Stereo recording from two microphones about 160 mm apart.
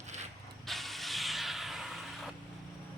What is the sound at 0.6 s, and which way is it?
Vehicle, centre (ahead or behind).